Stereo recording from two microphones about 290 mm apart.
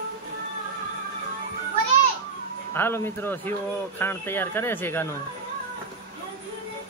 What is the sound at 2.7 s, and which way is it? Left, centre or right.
Speech, centre.